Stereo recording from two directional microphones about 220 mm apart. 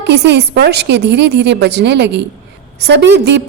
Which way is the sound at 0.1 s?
50° right (ahead or behind).